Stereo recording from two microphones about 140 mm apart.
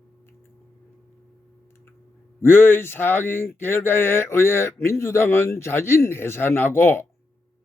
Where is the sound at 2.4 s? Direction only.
15° left (ahead or behind).